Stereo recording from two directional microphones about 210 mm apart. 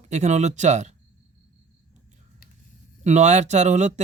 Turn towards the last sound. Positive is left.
turn(degrees=-35)  # may be behind; listen again after turning